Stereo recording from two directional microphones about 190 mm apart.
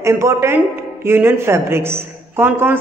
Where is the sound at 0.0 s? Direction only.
15° right (ahead or behind).